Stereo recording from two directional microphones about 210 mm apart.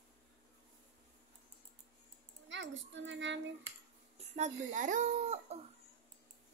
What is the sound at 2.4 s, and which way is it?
Speech, 60° right (ahead or behind).